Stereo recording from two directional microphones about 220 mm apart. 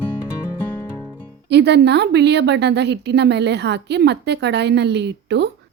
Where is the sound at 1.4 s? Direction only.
50° right (ahead or behind).